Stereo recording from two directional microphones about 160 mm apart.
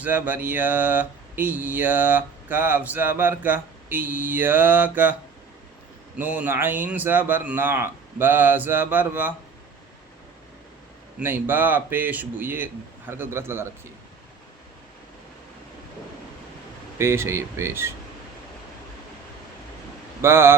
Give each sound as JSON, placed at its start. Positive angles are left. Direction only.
{"t": 0.0, "sound": "speech", "side_deg": -10}
{"t": 6.1, "sound": "speech", "side_deg": -10}
{"t": 11.2, "sound": "speech", "side_deg": -10}
{"t": 17.0, "sound": "speech", "side_deg": -15}
{"t": 20.2, "sound": "speech", "side_deg": -15}